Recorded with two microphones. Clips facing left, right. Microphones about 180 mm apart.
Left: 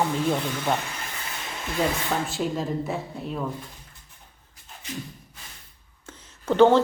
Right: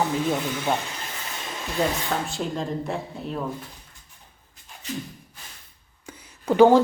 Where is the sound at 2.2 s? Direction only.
Centre (ahead or behind).